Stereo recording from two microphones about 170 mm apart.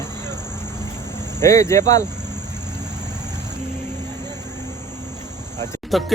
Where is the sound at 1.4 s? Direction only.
15° left (ahead or behind).